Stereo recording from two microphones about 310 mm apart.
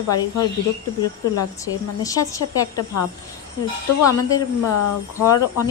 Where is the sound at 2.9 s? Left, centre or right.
Left.